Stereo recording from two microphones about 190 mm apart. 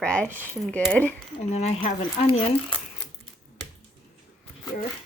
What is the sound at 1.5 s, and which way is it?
Speech, 35° left (ahead or behind).